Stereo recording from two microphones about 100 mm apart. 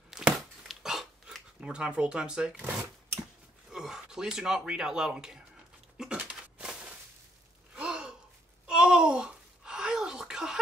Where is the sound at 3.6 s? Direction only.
5° right (ahead or behind).